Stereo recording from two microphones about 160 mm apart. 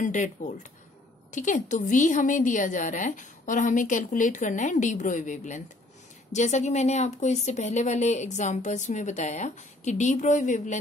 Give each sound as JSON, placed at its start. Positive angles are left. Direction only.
{"t": 0.0, "sound": "speech", "side_deg": 50}